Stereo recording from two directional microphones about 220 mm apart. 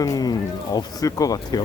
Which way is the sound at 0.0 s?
15° left (ahead or behind).